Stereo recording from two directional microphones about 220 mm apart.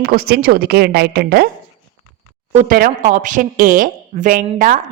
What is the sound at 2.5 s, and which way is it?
A woman's voice, 40° right (ahead or behind).